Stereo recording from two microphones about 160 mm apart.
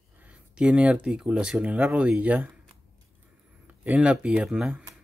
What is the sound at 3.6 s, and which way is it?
Speech, 10° right (ahead or behind).